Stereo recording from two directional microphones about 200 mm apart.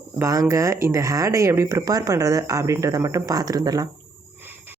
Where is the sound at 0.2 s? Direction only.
15° right (ahead or behind).